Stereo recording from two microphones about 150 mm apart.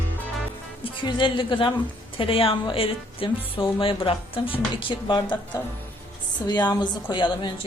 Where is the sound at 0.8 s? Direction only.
35° left (ahead or behind).